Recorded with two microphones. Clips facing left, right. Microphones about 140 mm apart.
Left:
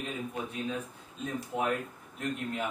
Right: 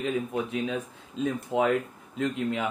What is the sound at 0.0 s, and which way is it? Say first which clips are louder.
A man's voice: right 8 dB; 90° right.